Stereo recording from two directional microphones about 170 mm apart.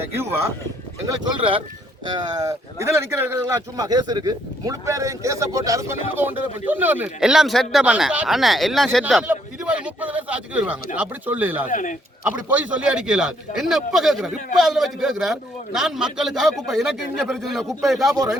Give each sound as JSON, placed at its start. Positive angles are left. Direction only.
{"t": 0.0, "sound": "speech", "side_deg": -15}
{"t": 1.0, "sound": "speech", "side_deg": -25}
{"t": 11.7, "sound": "speech", "side_deg": 50}
{"t": 12.2, "sound": "speech", "side_deg": -5}